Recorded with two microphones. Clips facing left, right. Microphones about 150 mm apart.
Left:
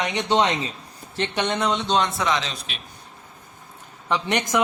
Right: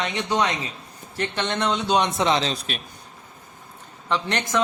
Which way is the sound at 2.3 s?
35° right (ahead or behind).